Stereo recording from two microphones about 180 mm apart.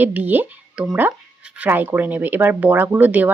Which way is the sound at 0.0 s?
10° right (ahead or behind).